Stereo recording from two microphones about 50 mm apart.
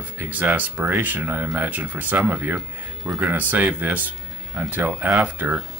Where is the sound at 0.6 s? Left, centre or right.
Right.